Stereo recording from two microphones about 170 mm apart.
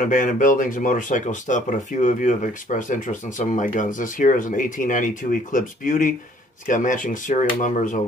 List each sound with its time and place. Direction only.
0.0 s speech: 50° left (ahead or behind)